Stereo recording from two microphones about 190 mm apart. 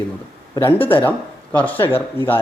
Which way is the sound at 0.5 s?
15° left (ahead or behind).